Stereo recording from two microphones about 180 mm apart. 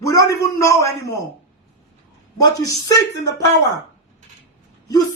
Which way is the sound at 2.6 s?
20° left (ahead or behind).